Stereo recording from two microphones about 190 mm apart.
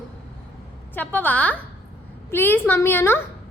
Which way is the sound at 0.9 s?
10° left (ahead or behind).